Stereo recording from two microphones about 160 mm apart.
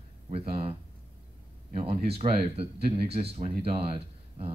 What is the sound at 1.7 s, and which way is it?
Speech, 40° right (ahead or behind).